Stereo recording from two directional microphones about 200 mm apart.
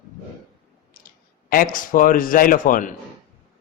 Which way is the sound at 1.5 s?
45° left (ahead or behind).